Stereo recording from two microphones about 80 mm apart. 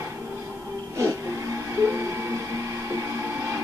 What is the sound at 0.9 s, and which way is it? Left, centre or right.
Music, right.